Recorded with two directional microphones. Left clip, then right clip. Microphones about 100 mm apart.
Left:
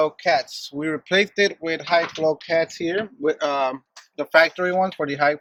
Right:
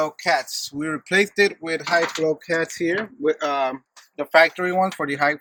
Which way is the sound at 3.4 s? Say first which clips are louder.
Even; 90° left.